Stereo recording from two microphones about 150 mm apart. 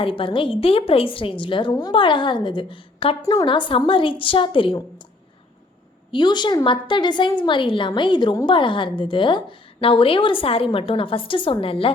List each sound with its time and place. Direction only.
0.0 s a woman's voice: 35° left (ahead or behind)
3.2 s a woman's voice: 25° left (ahead or behind)
3.4 s a woman's voice: 35° left (ahead or behind)
6.1 s a woman's voice: 30° left (ahead or behind)